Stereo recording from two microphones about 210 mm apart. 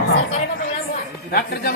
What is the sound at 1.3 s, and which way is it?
Speech, 50° left (ahead or behind).